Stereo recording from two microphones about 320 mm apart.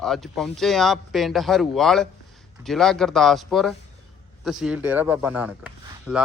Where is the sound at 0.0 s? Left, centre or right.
Centre.